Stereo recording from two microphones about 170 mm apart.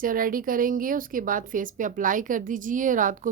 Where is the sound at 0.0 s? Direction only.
55° right (ahead or behind).